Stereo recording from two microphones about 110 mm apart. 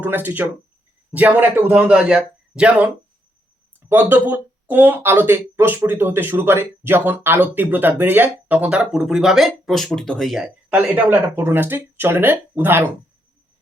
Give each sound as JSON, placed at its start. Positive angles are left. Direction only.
{"t": 0.0, "sound": "speech", "side_deg": -15}